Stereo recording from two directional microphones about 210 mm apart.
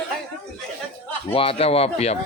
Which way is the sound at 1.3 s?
25° left (ahead or behind).